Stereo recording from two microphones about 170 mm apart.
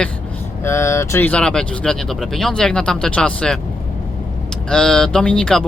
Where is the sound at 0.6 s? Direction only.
15° left (ahead or behind).